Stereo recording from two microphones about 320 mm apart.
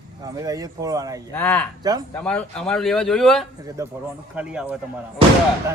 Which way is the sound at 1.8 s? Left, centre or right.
Centre.